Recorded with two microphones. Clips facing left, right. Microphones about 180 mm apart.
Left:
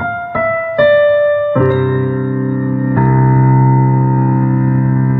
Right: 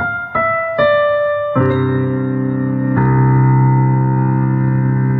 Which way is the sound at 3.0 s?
45° left (ahead or behind).